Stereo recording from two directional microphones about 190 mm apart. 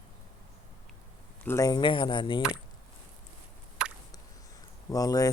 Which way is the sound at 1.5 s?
15° left (ahead or behind).